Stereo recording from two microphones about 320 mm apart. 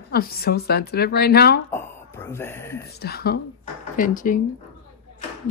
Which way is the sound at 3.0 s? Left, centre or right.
Left.